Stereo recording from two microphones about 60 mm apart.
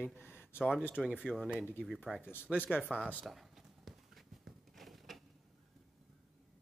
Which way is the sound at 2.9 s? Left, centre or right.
Centre.